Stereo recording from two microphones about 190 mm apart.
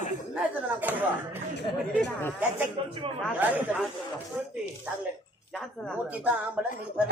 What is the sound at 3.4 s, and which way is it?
Speech, 10° right (ahead or behind).